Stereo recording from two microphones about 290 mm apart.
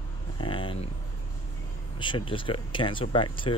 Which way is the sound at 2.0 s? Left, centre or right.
Centre.